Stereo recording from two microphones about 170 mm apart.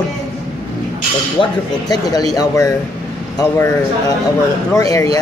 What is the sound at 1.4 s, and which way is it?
Speech, 25° left (ahead or behind).